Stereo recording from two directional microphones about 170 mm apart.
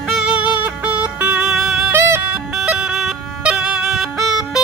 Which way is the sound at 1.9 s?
15° right (ahead or behind).